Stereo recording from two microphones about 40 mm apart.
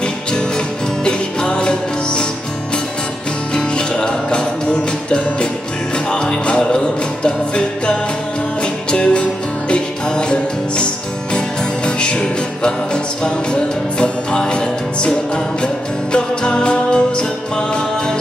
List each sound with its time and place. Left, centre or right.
1.0 s music: left
3.5 s music: left